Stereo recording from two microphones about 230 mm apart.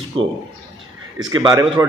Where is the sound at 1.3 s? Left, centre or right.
Centre.